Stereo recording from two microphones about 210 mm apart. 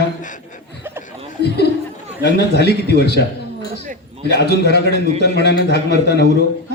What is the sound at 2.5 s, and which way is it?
Speech, 50° left (ahead or behind).